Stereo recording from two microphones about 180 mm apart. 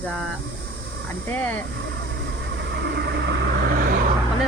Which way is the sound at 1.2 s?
10° left (ahead or behind).